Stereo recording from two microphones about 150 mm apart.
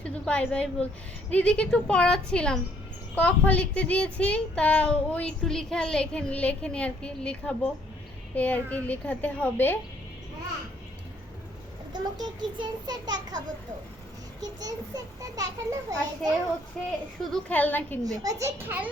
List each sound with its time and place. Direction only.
0.0 s a woman's voice: 10° left (ahead or behind)
11.9 s a child's voice: 30° right (ahead or behind)
14.6 s a child's voice: 25° right (ahead or behind)
17.3 s a child's voice: 10° left (ahead or behind)
18.0 s a child's voice: 25° right (ahead or behind)